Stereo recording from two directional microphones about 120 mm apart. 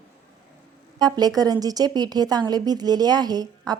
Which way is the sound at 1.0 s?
35° right (ahead or behind).